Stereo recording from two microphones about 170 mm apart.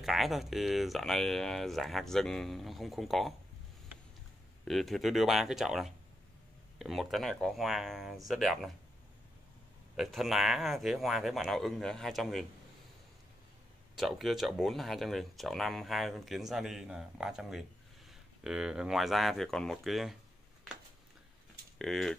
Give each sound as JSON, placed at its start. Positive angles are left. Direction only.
{"t": 0.0, "sound": "speech", "side_deg": 0}
{"t": 4.6, "sound": "speech", "side_deg": 0}
{"t": 9.9, "sound": "speech", "side_deg": 0}
{"t": 13.9, "sound": "speech", "side_deg": 0}
{"t": 21.7, "sound": "speech", "side_deg": 0}